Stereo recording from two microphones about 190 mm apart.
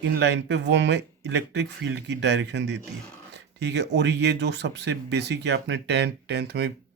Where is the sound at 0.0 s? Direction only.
65° right (ahead or behind).